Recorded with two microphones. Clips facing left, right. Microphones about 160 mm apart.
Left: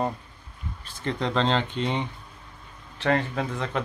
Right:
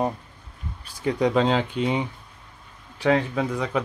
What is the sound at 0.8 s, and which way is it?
Speech, 10° right (ahead or behind).